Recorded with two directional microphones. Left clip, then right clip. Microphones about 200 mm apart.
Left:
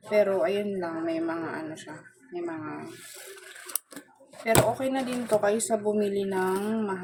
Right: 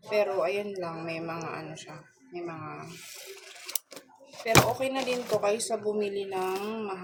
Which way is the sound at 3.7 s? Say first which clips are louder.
Right 2 dB; 20° left (ahead or behind).